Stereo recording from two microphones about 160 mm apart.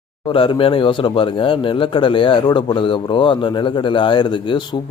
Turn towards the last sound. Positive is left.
turn(degrees=30)  # may be behind; listen again after turning